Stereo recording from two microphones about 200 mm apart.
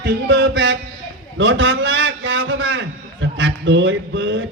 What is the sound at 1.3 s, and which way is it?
A man's voice, 70° right (ahead or behind).